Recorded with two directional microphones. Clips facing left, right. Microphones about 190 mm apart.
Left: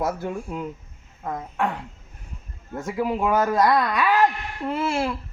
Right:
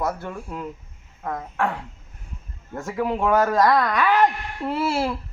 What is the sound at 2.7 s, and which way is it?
Speech, 15° left (ahead or behind).